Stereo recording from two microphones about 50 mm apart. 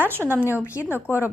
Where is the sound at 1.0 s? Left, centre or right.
Left.